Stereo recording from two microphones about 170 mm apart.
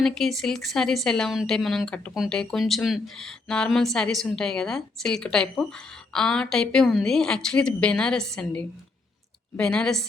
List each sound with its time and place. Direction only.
0.0 s speech: centre (ahead or behind)